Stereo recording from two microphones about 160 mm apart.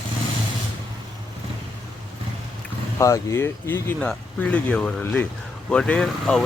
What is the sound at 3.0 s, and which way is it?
Speech, 20° left (ahead or behind).